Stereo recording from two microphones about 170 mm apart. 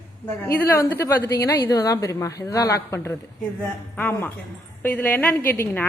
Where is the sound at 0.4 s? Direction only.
15° left (ahead or behind).